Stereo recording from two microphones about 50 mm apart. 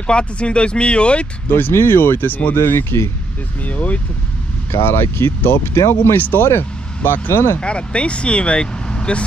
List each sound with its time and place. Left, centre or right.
0.0 s speech: left
1.7 s speech: left
2.5 s speech: left
3.6 s speech: left
4.7 s speech: left
5.8 s speech: left
6.1 s speech: left
7.6 s speech: left